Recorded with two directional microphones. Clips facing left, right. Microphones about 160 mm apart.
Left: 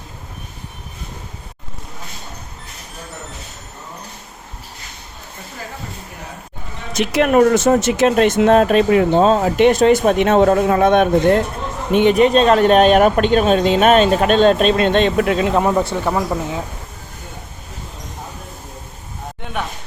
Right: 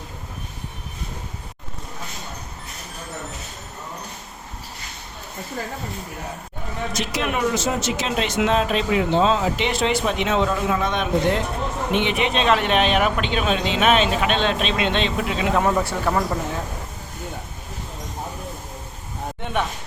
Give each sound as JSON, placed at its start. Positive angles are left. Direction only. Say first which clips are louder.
{"t": 6.9, "sound": "speech", "louder": "left 12 dB", "side_deg": 60}
{"t": 7.3, "sound": "speech", "louder": "left 11 dB", "side_deg": 50}
{"t": 15.5, "sound": "speech", "louder": "left 4 dB", "side_deg": 20}